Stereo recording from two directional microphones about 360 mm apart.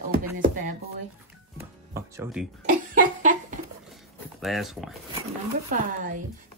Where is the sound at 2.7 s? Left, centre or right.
Right.